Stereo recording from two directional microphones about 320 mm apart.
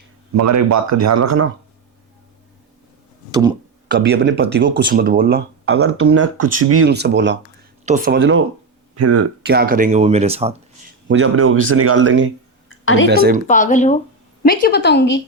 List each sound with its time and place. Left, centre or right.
0.3 s speech: right
3.8 s speech: right
5.7 s speech: right
6.9 s speech: right
9.0 s speech: right
9.4 s speech: right
11.1 s speech: right
12.6 s a sound: left
13.1 s speech: right
13.5 s speech: left